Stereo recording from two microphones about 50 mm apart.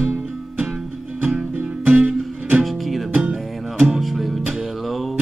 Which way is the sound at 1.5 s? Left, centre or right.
Right.